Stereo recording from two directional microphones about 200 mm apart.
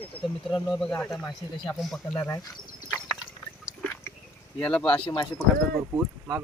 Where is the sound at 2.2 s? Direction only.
15° left (ahead or behind).